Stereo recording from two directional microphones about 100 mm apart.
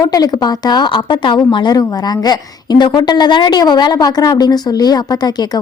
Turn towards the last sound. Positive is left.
turn(degrees=40)  # may be behind; listen again after turning